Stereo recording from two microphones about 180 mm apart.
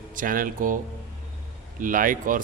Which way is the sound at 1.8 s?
50° right (ahead or behind).